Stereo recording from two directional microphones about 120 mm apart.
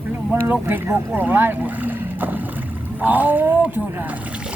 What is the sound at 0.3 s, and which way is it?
Speech, 20° right (ahead or behind).